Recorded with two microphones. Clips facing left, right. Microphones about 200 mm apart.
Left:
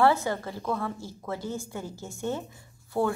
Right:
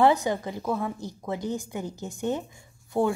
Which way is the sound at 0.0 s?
15° right (ahead or behind).